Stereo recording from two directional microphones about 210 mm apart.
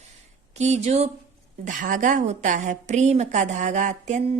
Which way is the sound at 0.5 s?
30° right (ahead or behind).